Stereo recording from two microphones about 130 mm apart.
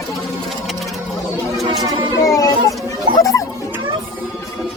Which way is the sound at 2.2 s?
25° left (ahead or behind).